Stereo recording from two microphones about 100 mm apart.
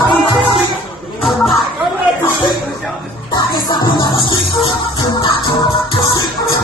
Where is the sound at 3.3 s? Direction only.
45° left (ahead or behind).